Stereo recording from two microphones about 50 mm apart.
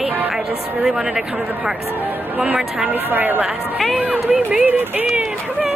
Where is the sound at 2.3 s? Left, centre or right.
Right.